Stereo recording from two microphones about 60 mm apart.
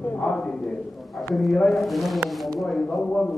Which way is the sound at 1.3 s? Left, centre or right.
Centre.